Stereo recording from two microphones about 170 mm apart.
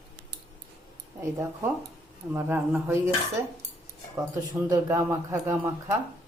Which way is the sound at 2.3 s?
15° right (ahead or behind).